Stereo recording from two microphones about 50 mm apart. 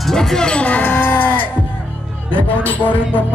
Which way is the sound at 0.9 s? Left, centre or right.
Left.